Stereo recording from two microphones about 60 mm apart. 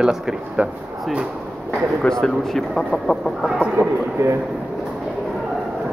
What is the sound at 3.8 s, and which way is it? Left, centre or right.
Speech, right.